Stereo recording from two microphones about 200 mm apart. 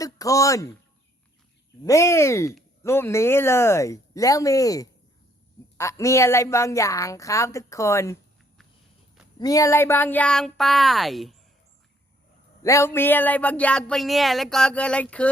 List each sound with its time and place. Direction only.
0.0 s speech: 15° left (ahead or behind)
1.8 s speech: 15° left (ahead or behind)
9.4 s speech: 15° left (ahead or behind); by 11.3 s centre (ahead or behind)
12.6 s speech: 15° left (ahead or behind)